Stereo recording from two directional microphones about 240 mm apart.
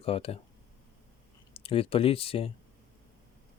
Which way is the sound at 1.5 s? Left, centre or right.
Left.